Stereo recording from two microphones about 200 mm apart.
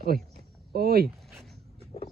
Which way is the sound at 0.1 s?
45° right (ahead or behind).